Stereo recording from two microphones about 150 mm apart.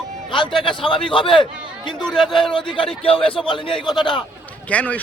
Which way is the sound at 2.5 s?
35° left (ahead or behind).